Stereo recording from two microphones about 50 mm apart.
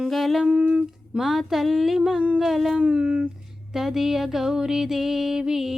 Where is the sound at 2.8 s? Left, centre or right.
Right.